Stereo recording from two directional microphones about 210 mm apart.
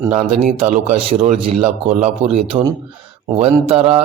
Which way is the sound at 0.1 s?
30° right (ahead or behind).